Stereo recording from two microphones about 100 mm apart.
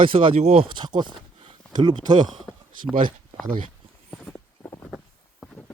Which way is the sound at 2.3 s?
Centre (ahead or behind).